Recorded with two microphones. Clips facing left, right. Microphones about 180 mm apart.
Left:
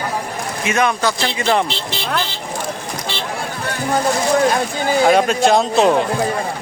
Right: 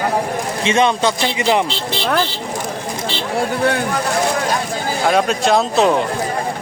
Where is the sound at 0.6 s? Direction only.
25° right (ahead or behind).